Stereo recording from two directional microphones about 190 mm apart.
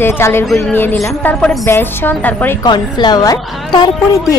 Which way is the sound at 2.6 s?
25° left (ahead or behind).